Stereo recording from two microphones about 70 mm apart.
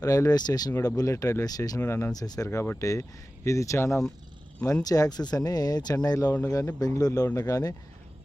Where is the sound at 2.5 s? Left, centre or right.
Left.